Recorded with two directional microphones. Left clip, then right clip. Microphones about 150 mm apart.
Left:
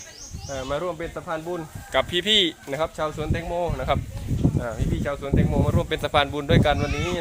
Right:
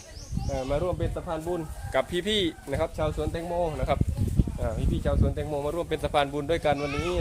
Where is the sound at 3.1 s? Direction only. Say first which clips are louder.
Left 2 dB; 45° left (ahead or behind).